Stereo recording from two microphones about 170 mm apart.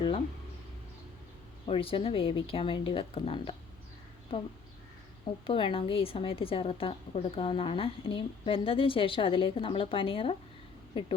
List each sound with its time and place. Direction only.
1.6 s speech: 30° left (ahead or behind)
5.5 s speech: 30° left (ahead or behind)